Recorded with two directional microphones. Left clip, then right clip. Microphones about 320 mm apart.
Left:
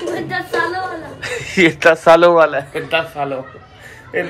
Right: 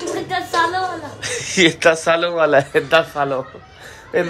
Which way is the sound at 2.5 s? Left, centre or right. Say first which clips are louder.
Right 5 dB; centre.